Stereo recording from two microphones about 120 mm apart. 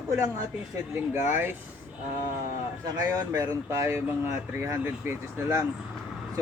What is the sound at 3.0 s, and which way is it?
Speech, 30° right (ahead or behind).